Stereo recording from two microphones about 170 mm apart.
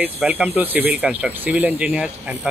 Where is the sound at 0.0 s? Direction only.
10° right (ahead or behind).